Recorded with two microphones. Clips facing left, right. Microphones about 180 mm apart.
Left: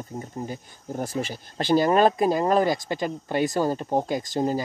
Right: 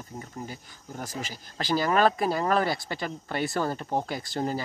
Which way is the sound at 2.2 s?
20° left (ahead or behind).